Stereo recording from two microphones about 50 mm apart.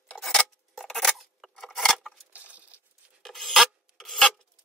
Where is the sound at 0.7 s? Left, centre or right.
Centre.